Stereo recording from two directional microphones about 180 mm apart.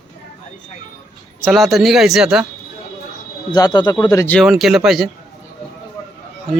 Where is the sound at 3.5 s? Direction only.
20° left (ahead or behind).